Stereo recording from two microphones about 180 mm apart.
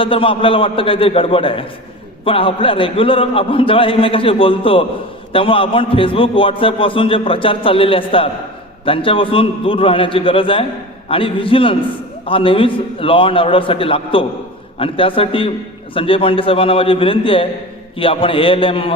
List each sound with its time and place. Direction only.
0.0 s a man's voice: 30° left (ahead or behind)